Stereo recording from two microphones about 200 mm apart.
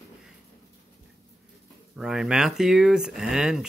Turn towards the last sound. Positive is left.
turn(degrees=-5)  # may be behind; listen again after turning